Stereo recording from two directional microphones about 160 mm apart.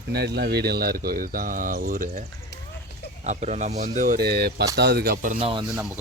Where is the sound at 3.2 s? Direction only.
45° right (ahead or behind).